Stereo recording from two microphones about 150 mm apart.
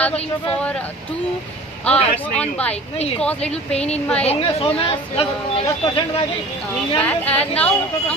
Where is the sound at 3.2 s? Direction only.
5° left (ahead or behind).